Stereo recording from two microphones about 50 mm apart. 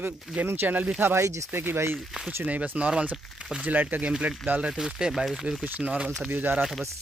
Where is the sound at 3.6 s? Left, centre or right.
Right.